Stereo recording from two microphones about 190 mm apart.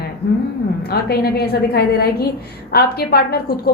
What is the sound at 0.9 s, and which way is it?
A woman's voice, 55° left (ahead or behind).